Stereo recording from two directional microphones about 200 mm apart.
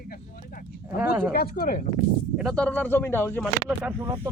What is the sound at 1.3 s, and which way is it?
Speech, 45° left (ahead or behind).